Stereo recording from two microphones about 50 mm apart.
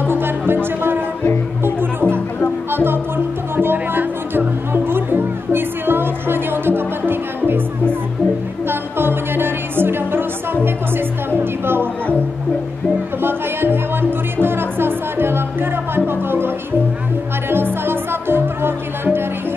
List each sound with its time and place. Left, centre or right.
0.0 s music: right
8.6 s music: right
13.2 s music: right